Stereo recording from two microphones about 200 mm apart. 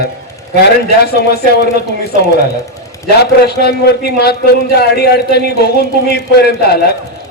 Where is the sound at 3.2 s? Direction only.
55° left (ahead or behind).